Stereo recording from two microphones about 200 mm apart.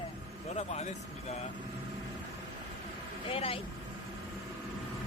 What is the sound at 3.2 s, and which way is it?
Speech, 30° left (ahead or behind).